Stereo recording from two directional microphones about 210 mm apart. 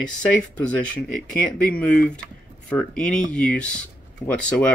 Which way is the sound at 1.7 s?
5° left (ahead or behind).